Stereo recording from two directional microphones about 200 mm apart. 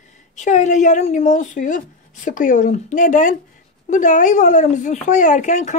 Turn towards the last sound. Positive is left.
turn(degrees=35)  # may be behind; listen again after turning